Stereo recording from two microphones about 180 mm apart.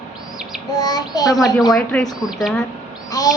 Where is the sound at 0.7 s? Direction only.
20° left (ahead or behind).